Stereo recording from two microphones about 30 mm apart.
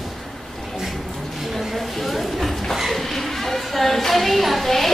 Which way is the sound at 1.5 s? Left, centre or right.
Centre.